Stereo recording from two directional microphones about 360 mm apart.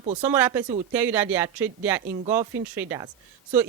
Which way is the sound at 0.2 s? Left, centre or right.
Centre.